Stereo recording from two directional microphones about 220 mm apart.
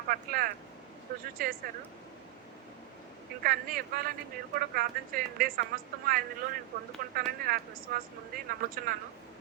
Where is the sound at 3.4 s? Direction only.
40° right (ahead or behind).